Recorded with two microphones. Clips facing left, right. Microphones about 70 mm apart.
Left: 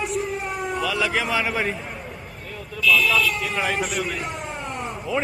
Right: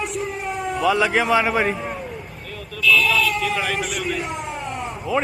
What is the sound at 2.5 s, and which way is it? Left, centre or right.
Vehicle, centre.